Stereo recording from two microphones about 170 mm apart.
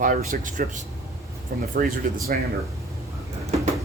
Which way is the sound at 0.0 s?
50° right (ahead or behind).